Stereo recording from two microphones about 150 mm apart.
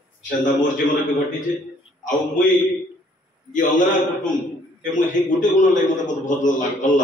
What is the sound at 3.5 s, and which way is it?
A man's voice, 60° left (ahead or behind).